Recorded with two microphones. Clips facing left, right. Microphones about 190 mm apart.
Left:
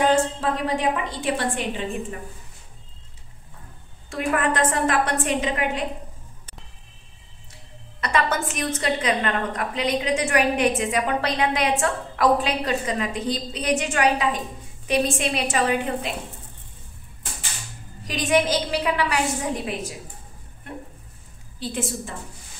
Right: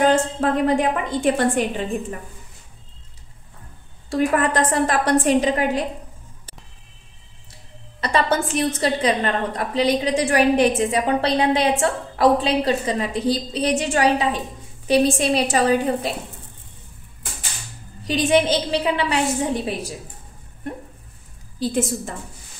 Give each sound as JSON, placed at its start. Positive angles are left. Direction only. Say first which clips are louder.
{"t": 0.1, "sound": "a woman's voice", "louder": "right 2 dB", "side_deg": -50}
{"t": 4.1, "sound": "a woman's voice", "louder": "right 4 dB", "side_deg": -35}
{"t": 8.0, "sound": "a woman's voice", "louder": "right 3 dB", "side_deg": -30}
{"t": 18.0, "sound": "a woman's voice", "louder": "right 3 dB", "side_deg": -30}
{"t": 21.5, "sound": "a woman's voice", "louder": "right 6 dB", "side_deg": -40}